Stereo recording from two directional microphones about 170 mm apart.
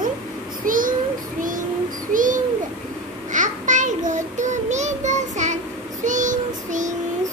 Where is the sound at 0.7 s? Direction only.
55° right (ahead or behind).